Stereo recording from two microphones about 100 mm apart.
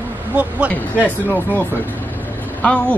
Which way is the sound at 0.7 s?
15° left (ahead or behind).